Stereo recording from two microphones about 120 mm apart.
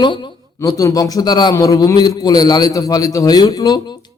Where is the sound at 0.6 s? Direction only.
30° left (ahead or behind).